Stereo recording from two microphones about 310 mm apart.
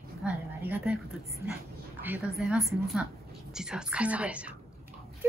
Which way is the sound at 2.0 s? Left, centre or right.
Centre.